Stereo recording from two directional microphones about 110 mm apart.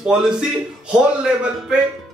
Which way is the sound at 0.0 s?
5° right (ahead or behind).